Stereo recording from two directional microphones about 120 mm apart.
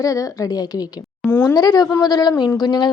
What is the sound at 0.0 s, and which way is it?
Speech, 30° left (ahead or behind).